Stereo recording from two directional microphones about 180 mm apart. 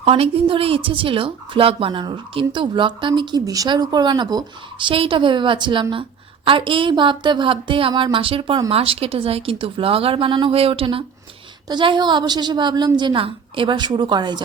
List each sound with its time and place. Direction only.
0.0 s speech: 30° right (ahead or behind)